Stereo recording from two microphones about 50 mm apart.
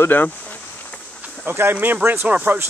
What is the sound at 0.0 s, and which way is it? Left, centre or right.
Speech, left.